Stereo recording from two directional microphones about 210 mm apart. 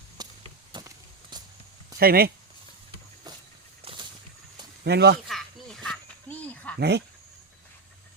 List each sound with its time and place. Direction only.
0.2 s chop: 20° right (ahead or behind)
0.7 s vehicle: 20° right (ahead or behind)
2.0 s speech: 45° right (ahead or behind)
3.8 s a sound: 25° right (ahead or behind)
4.8 s speech: 50° right (ahead or behind)
5.3 s a sound: centre (ahead or behind)
6.7 s speech: 55° right (ahead or behind)